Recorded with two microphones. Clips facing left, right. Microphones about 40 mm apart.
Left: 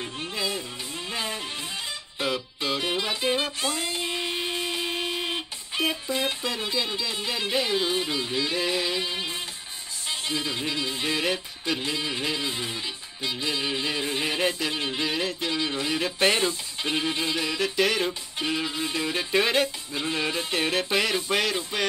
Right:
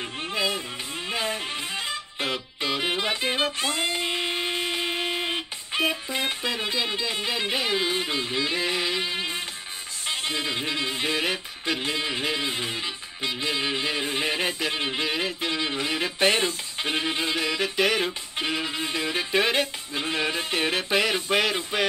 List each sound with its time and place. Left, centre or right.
0.0 s music: centre
18.9 s music: centre